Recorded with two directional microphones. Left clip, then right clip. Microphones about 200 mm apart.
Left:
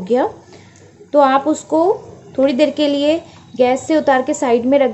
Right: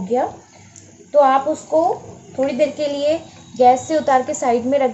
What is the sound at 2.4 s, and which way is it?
A woman's voice, 45° left (ahead or behind).